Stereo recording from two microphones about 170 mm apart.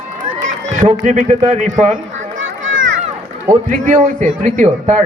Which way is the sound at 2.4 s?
90° right.